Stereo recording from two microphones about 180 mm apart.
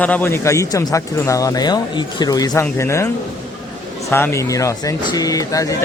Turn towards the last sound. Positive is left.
turn(degrees=20)  # may be behind; listen again after turning